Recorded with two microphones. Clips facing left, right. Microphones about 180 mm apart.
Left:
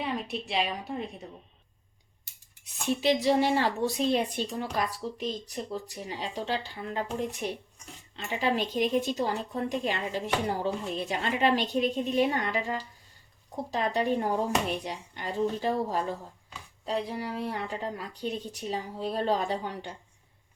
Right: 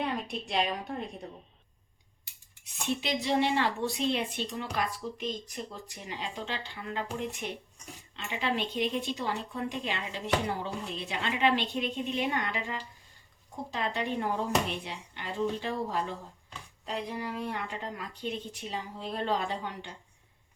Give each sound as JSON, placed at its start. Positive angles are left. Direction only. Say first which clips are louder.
{"t": 0.0, "sound": "a woman's voice", "louder": "left 1 dB", "side_deg": 0}
{"t": 2.8, "sound": "speech", "louder": "left 6 dB", "side_deg": 40}